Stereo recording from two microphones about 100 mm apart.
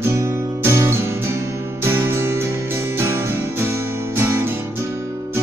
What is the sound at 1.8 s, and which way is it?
Music, 25° right (ahead or behind).